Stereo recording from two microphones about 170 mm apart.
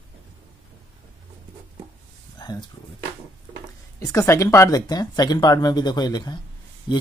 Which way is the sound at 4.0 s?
15° left (ahead or behind).